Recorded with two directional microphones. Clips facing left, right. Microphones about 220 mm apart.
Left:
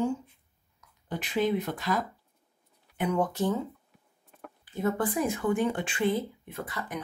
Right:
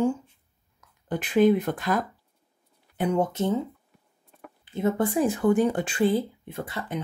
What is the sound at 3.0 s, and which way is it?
Speech, 25° right (ahead or behind).